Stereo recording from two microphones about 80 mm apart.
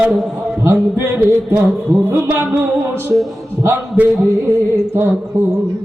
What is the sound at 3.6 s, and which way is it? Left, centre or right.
Speech, right.